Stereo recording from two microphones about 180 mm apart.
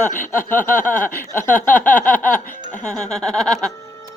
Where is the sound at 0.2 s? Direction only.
10° left (ahead or behind).